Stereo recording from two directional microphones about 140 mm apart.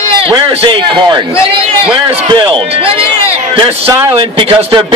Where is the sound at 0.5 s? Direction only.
40° right (ahead or behind).